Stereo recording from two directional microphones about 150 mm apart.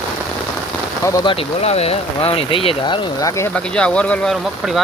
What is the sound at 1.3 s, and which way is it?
Speech, 40° left (ahead or behind).